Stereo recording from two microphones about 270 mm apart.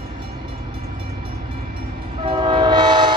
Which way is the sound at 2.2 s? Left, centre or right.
Centre.